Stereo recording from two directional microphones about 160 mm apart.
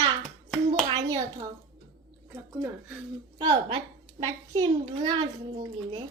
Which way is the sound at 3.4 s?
30° right (ahead or behind).